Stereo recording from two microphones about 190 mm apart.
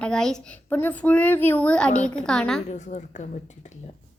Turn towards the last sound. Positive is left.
turn(degrees=40)  # may be behind; listen again after turning